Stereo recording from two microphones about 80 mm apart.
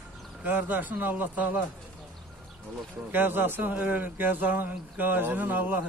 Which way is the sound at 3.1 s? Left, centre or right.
Right.